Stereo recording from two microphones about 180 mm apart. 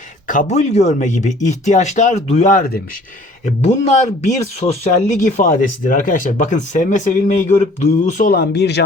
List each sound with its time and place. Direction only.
0.3 s speech: 45° left (ahead or behind)
8.3 s speech: 65° left (ahead or behind)